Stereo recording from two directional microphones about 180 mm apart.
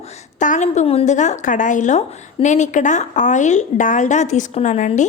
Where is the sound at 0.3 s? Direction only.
45° left (ahead or behind).